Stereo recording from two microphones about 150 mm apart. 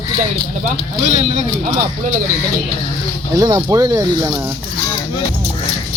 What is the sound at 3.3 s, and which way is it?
Speech, 25° right (ahead or behind).